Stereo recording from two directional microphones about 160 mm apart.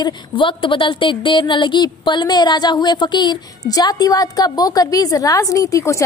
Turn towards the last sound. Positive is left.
turn(degrees=20)  # may be behind; listen again after turning